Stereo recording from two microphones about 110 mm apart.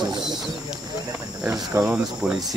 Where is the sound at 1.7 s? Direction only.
15° right (ahead or behind).